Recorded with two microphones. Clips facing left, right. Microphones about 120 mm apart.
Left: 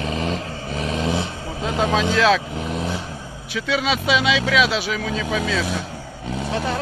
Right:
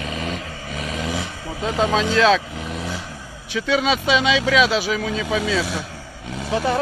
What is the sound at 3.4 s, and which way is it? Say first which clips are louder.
Speech: right 3 dB; centre (ahead or behind).